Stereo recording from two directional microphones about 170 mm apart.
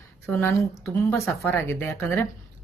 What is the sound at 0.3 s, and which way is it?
Speech, 15° left (ahead or behind).